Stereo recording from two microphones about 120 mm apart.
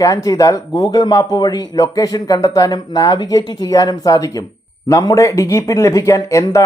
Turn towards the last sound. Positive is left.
turn(degrees=25)  # may be behind; listen again after turning